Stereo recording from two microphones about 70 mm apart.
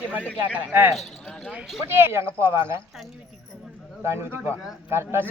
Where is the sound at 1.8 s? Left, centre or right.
Right.